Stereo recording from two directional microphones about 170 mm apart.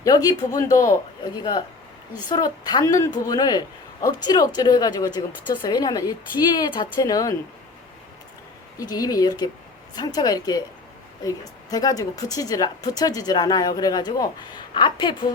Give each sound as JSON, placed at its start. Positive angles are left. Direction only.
{"t": 0.0, "sound": "a woman's voice", "side_deg": 20}
{"t": 8.8, "sound": "a woman's voice", "side_deg": 20}